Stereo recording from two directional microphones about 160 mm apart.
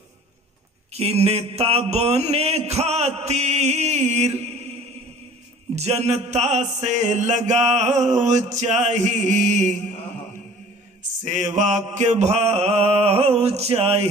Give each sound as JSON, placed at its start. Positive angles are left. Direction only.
{"t": 0.9, "sound": "mantra", "side_deg": -40}
{"t": 5.8, "sound": "mantra", "side_deg": -40}
{"t": 11.2, "sound": "mantra", "side_deg": -50}